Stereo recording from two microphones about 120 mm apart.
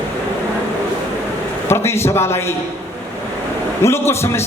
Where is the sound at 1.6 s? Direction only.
20° left (ahead or behind).